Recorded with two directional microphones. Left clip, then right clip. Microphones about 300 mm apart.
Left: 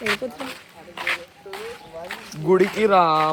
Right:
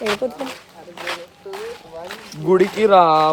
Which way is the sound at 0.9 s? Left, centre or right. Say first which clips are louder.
Left 2 dB; centre.